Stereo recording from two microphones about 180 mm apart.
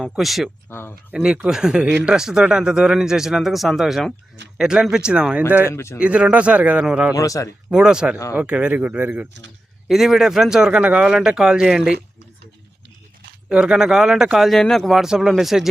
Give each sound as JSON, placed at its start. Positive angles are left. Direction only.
{"t": 0.0, "sound": "a man's voice", "side_deg": 0}
{"t": 0.7, "sound": "speech", "side_deg": 15}
{"t": 1.1, "sound": "a man's voice", "side_deg": -5}
{"t": 5.6, "sound": "speech", "side_deg": 15}
{"t": 6.0, "sound": "speech", "side_deg": -5}
{"t": 7.2, "sound": "speech", "side_deg": 20}
{"t": 7.7, "sound": "a man's voice", "side_deg": -5}
{"t": 13.5, "sound": "a man's voice", "side_deg": -5}